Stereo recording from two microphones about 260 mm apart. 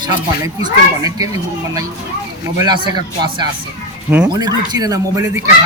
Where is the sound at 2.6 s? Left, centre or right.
Centre.